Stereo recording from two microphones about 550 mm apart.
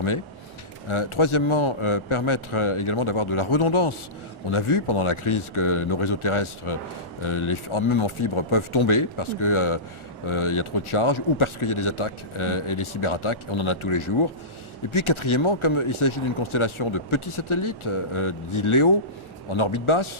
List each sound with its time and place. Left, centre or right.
0.9 s speech: left